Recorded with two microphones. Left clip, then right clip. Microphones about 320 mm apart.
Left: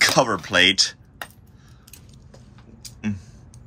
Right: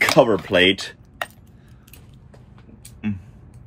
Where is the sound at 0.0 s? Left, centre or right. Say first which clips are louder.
Right 3 dB; left.